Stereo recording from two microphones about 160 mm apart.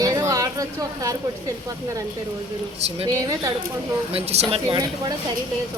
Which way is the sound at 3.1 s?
20° right (ahead or behind).